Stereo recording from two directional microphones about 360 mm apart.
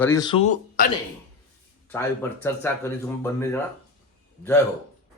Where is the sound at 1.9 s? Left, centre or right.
Centre.